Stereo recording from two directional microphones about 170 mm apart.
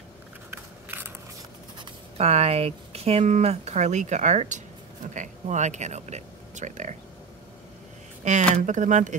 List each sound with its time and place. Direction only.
0.5 s a sound: 10° right (ahead or behind)
2.1 s speech: 40° right (ahead or behind)
8.2 s speech: 45° right (ahead or behind)